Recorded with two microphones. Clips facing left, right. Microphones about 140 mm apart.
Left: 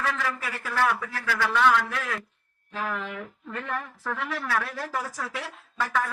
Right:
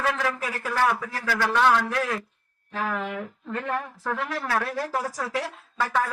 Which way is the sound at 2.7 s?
35° right (ahead or behind).